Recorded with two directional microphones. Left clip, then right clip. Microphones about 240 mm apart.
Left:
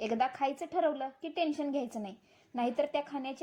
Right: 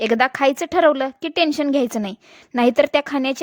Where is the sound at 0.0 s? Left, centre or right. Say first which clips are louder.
Right 14 dB; right.